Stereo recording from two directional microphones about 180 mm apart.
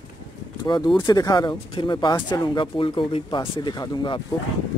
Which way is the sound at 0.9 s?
20° left (ahead or behind).